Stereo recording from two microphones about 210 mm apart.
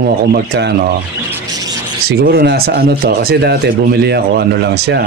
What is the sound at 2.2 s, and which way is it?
Speech, 50° right (ahead or behind).